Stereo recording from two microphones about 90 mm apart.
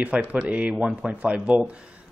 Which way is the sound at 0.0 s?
15° right (ahead or behind).